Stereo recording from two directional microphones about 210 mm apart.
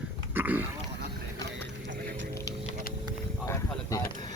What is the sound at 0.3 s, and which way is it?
Pig, 10° right (ahead or behind).